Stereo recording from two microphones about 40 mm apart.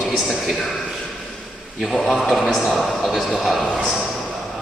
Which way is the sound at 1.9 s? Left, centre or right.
Centre.